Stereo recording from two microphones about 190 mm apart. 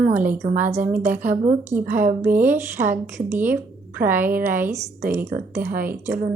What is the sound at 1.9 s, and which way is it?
Speech, 45° right (ahead or behind).